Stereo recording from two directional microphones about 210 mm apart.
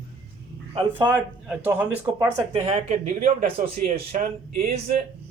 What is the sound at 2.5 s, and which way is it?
Speech, 35° right (ahead or behind).